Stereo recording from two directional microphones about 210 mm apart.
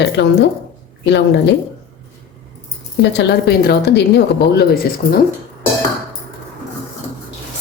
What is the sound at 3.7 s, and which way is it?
Speech, 55° left (ahead or behind).